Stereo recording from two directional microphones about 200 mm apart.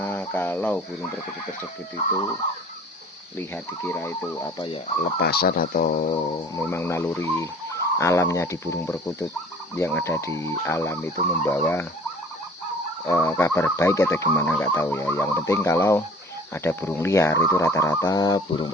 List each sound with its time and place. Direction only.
0.0 s speech: 10° left (ahead or behind)
3.3 s speech: 10° left (ahead or behind)
5.1 s speech: 50° left (ahead or behind)
6.5 s speech: 15° left (ahead or behind)
13.1 s speech: 10° left (ahead or behind)